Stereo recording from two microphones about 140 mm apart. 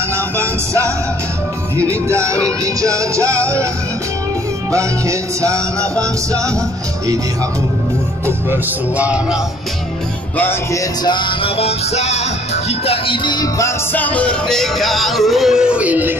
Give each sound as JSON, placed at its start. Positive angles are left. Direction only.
{"t": 0.4, "sound": "music", "side_deg": -20}
{"t": 4.7, "sound": "music", "side_deg": -20}
{"t": 8.3, "sound": "music", "side_deg": -15}
{"t": 10.3, "sound": "music", "side_deg": 15}
{"t": 11.1, "sound": "music", "side_deg": 35}
{"t": 13.9, "sound": "music", "side_deg": 10}